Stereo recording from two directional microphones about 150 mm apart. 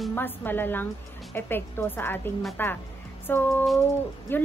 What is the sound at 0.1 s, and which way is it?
A woman's voice, 15° left (ahead or behind).